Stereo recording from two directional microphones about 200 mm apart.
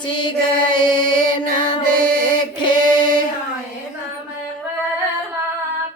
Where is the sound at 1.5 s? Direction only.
40° right (ahead or behind).